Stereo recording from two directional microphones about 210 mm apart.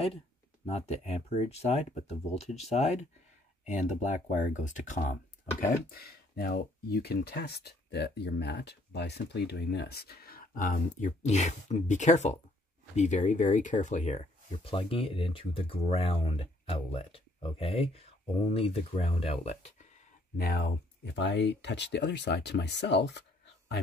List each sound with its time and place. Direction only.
0.7 s speech: 30° left (ahead or behind)
20.3 s speech: 45° left (ahead or behind)